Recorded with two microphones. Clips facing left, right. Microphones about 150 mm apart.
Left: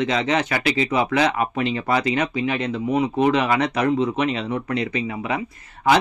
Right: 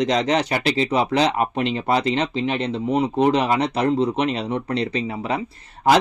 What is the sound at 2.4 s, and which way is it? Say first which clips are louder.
Speech: even; 30° right (ahead or behind).